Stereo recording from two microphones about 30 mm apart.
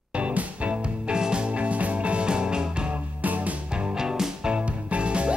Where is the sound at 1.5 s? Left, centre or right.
Right.